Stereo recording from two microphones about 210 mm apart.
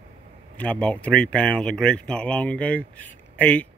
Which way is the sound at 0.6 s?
5° left (ahead or behind).